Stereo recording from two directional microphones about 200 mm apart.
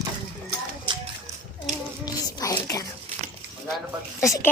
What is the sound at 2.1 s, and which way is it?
Speech, 15° left (ahead or behind).